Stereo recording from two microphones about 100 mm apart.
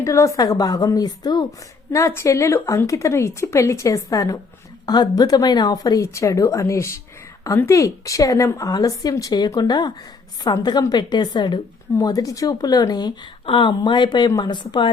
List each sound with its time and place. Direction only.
0.0 s a woman's voice: 30° left (ahead or behind)
1.9 s a woman's voice: 30° left (ahead or behind); by 11.6 s 45° left (ahead or behind)
11.9 s a woman's voice: 35° left (ahead or behind)
13.4 s speech: 55° left (ahead or behind)